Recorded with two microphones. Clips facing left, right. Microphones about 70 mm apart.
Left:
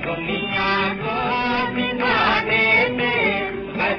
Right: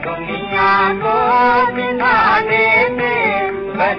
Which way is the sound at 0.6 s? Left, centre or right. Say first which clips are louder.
Right 10 dB; right.